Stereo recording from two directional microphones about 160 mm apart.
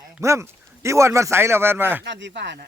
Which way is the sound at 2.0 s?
90° right.